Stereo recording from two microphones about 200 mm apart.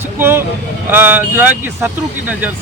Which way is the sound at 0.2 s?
10° right (ahead or behind).